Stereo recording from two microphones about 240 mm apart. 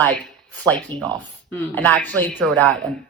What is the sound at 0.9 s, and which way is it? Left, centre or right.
Speech, centre.